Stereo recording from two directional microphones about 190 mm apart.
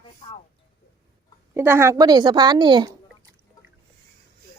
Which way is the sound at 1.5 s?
10° right (ahead or behind).